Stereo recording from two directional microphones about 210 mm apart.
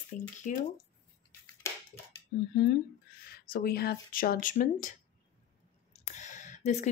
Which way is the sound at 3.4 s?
50° left (ahead or behind).